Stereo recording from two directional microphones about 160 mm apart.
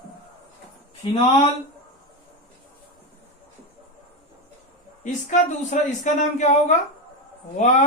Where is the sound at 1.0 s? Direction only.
45° left (ahead or behind).